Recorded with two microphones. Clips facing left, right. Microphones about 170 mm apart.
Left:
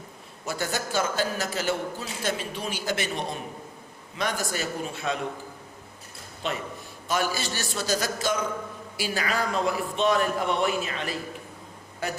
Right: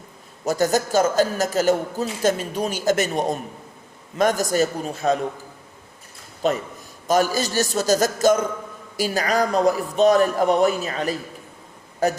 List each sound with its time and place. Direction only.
0.4 s a man's voice: 40° right (ahead or behind)
6.4 s a man's voice: 40° right (ahead or behind)